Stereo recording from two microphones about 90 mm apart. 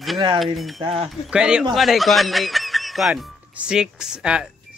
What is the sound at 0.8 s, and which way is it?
Speech, 90° right.